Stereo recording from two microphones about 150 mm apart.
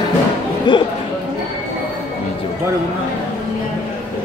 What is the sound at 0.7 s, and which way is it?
Speech, 30° left (ahead or behind).